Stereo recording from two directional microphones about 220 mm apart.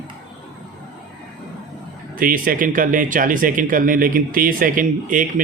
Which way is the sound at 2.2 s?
40° right (ahead or behind).